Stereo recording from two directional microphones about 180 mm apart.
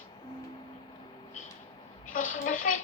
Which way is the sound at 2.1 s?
45° left (ahead or behind).